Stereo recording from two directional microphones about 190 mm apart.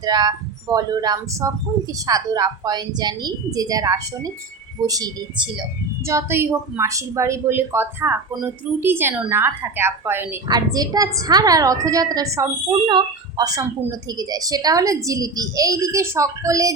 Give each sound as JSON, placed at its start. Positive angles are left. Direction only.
{"t": 0.0, "sound": "a woman's voice", "side_deg": -20}